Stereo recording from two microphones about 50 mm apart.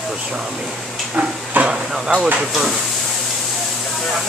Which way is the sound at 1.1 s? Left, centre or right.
Right.